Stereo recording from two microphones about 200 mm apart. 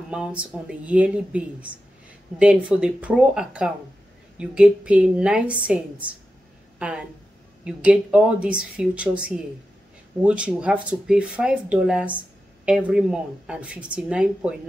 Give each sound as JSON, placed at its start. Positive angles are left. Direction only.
{"t": 0.1, "sound": "a woman's voice", "side_deg": -5}